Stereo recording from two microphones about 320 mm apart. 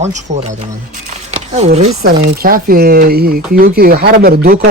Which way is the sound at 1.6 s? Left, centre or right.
Centre.